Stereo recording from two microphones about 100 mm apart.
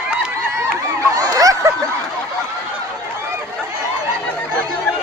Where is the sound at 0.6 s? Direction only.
35° right (ahead or behind).